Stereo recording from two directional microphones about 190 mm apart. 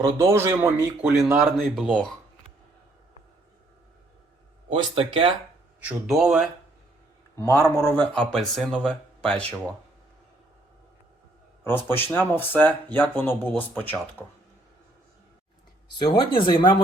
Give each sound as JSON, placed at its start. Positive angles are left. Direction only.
{"t": 0.0, "sound": "speech", "side_deg": -15}
{"t": 4.7, "sound": "speech", "side_deg": -25}
{"t": 5.8, "sound": "speech", "side_deg": 0}
{"t": 7.3, "sound": "speech", "side_deg": 15}
{"t": 11.6, "sound": "speech", "side_deg": 10}
{"t": 15.9, "sound": "speech", "side_deg": 25}